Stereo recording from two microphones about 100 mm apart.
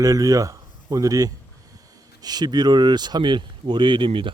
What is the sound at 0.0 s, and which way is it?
Speech, 35° right (ahead or behind).